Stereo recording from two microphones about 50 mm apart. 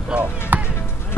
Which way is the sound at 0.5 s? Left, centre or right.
Right.